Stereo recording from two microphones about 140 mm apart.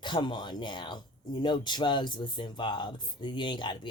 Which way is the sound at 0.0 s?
35° left (ahead or behind).